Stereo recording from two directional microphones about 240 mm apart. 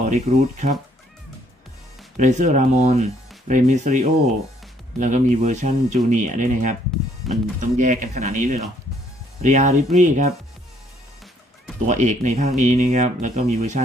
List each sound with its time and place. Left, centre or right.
0.0 s speech: right
2.1 s speech: right
7.2 s music: centre
7.6 s speech: right
11.9 s speech: right